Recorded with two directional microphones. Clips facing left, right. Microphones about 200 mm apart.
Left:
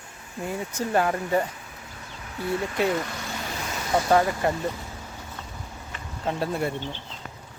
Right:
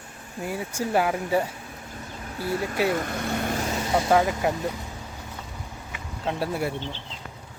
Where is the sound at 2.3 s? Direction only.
35° right (ahead or behind).